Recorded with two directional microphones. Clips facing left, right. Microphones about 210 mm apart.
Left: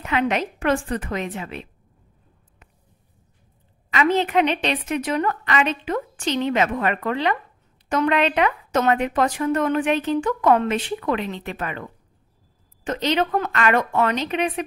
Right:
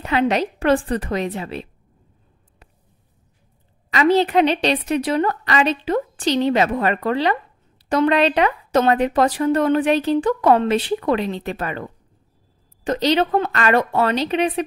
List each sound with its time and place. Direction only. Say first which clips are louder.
0.0 s speech: right 3 dB; 35° right (ahead or behind)
3.9 s speech: right 4 dB; 35° right (ahead or behind)